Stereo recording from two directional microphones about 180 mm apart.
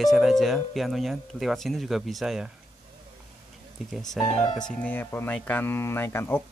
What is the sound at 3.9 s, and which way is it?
Speech, centre (ahead or behind).